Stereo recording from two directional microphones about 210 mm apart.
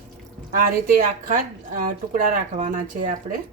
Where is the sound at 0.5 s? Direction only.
40° right (ahead or behind).